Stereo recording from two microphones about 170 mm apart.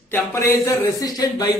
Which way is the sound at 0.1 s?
15° left (ahead or behind).